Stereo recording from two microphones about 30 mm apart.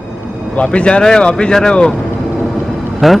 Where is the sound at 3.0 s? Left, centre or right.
Centre.